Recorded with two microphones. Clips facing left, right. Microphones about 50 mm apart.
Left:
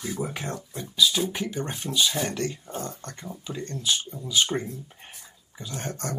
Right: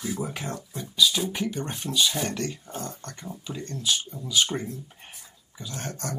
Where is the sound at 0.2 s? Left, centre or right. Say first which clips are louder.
Left 1 dB; centre.